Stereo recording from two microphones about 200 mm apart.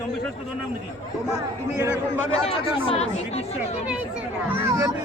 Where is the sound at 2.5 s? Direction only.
30° left (ahead or behind).